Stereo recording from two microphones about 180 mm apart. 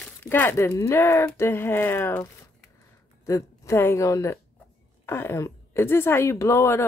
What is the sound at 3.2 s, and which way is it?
A woman's voice, 15° left (ahead or behind).